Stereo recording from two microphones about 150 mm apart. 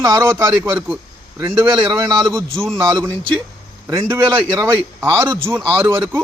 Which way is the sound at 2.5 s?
5° left (ahead or behind).